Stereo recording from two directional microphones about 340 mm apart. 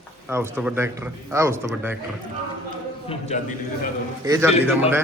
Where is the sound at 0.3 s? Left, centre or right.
Centre.